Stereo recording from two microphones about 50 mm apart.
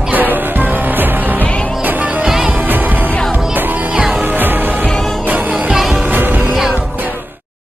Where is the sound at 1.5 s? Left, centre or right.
Left.